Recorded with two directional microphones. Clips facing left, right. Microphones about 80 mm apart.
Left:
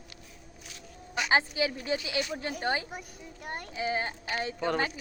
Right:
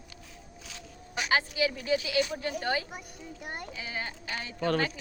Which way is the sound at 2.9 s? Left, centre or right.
Centre.